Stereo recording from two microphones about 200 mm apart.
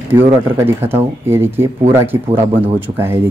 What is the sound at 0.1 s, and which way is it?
Speech, 10° right (ahead or behind).